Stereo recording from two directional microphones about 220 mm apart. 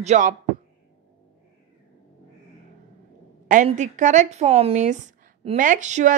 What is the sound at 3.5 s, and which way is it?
A woman's voice, 35° right (ahead or behind).